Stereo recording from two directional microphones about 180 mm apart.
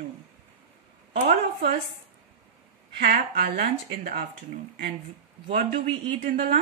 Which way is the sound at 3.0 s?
55° right (ahead or behind).